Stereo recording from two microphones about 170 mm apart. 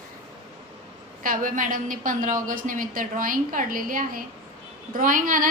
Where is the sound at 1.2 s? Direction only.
50° right (ahead or behind).